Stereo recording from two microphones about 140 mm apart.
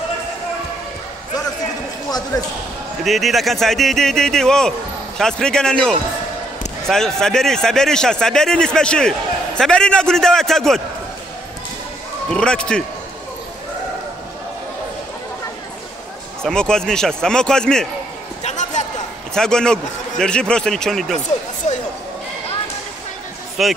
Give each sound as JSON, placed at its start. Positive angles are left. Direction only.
{"t": 2.3, "sound": "speech", "side_deg": 25}
{"t": 3.0, "sound": "a man's voice", "side_deg": 0}
{"t": 12.3, "sound": "speech", "side_deg": 5}
{"t": 16.4, "sound": "a man's voice", "side_deg": 5}
{"t": 18.4, "sound": "a sound", "side_deg": 60}
{"t": 19.3, "sound": "a man's voice", "side_deg": 5}
{"t": 23.6, "sound": "a man's voice", "side_deg": 0}